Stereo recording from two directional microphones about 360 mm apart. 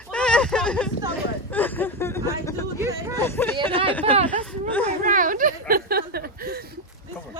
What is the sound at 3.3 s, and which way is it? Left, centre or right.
Speech, centre.